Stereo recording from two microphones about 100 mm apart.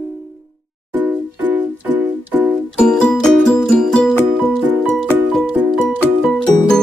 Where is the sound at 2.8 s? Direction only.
10° left (ahead or behind).